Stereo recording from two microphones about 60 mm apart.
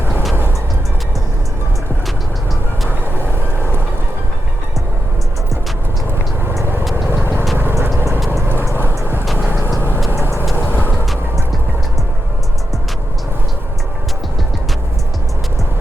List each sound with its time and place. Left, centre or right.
6.9 s vehicle: right
8.9 s vehicle: right
10.2 s vehicle: right
10.5 s vehicle: left